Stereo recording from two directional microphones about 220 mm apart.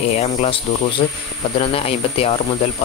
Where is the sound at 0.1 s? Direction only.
30° left (ahead or behind).